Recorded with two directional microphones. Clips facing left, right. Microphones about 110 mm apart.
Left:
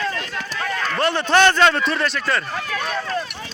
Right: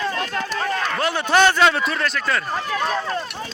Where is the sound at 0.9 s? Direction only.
5° right (ahead or behind).